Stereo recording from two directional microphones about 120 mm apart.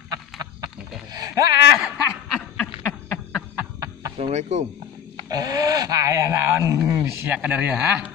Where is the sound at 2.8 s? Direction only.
20° left (ahead or behind).